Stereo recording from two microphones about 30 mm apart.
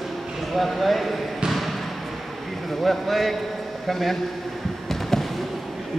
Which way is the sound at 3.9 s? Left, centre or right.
Centre.